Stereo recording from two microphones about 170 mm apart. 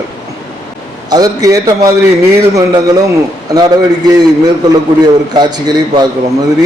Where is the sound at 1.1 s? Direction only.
20° right (ahead or behind).